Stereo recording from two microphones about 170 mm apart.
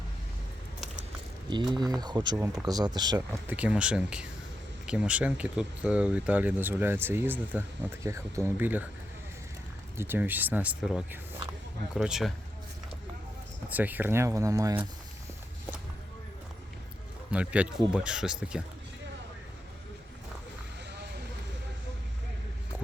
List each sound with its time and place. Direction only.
1.5 s speech: 25° right (ahead or behind)
3.2 s speech: 10° right (ahead or behind)
10.0 s speech: 10° right (ahead or behind)
13.7 s speech: 10° right (ahead or behind)
17.3 s speech: 10° right (ahead or behind)